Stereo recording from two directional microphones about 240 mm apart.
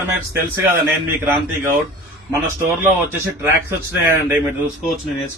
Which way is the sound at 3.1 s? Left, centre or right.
Centre.